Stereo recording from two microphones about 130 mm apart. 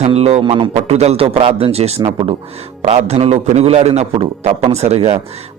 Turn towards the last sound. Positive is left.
turn(degrees=-55)  # may be behind; listen again after turning